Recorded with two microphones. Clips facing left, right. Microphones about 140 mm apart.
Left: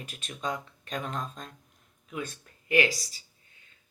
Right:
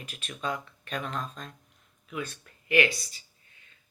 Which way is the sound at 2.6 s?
30° left (ahead or behind).